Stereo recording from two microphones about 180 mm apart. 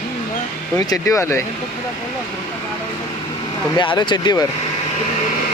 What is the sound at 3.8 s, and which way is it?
Speech, 25° left (ahead or behind).